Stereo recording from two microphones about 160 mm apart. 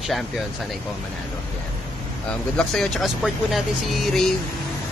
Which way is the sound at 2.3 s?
5° left (ahead or behind).